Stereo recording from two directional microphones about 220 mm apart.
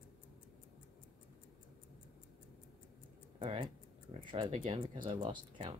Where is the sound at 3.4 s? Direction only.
25° right (ahead or behind).